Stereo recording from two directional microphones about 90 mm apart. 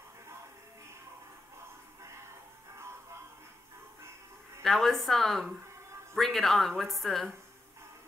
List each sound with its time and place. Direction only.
4.6 s speech: 5° left (ahead or behind)